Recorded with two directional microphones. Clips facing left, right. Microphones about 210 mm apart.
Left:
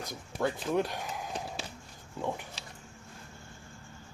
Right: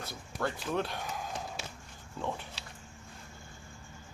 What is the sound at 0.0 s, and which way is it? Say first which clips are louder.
Speech: left 3 dB; 15° left (ahead or behind).